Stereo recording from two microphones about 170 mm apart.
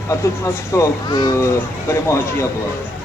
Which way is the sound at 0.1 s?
15° left (ahead or behind).